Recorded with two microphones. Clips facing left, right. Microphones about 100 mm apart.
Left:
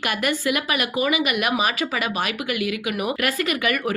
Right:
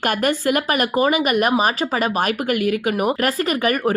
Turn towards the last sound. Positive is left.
turn(degrees=-40)  # may be behind; listen again after turning